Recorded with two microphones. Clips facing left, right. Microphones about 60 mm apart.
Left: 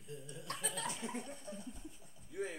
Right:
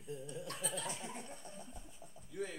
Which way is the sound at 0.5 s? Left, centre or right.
Left.